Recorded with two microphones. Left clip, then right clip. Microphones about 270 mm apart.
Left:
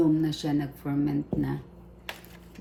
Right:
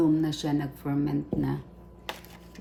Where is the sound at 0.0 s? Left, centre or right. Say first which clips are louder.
Even; centre.